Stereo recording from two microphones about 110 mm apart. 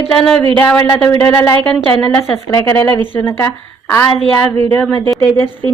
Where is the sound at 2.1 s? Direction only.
25° left (ahead or behind).